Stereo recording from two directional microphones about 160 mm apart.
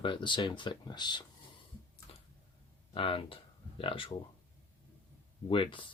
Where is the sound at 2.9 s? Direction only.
35° left (ahead or behind).